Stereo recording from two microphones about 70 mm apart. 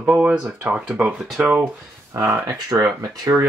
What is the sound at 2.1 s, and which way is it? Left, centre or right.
Speech, right.